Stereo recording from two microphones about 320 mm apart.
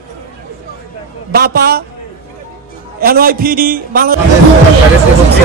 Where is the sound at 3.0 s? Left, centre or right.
Right.